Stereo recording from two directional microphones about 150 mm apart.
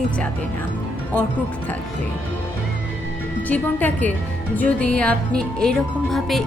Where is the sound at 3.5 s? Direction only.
10° left (ahead or behind).